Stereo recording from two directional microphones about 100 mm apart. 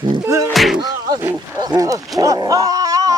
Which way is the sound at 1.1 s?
15° right (ahead or behind).